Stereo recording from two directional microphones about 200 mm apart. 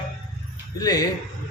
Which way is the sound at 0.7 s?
20° left (ahead or behind).